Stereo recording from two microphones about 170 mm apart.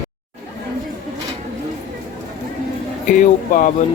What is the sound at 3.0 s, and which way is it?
Speech, 50° left (ahead or behind).